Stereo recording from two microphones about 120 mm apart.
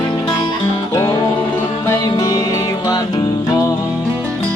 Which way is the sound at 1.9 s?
30° left (ahead or behind).